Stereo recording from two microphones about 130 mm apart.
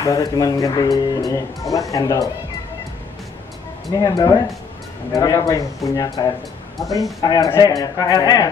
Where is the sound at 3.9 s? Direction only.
30° left (ahead or behind).